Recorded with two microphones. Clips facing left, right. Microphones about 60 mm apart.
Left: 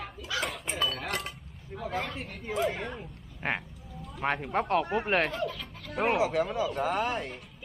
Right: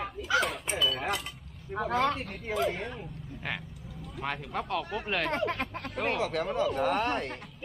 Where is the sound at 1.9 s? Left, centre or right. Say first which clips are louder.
Right 7 dB; right.